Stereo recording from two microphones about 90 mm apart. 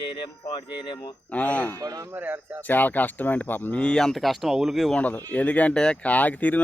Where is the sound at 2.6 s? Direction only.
20° left (ahead or behind).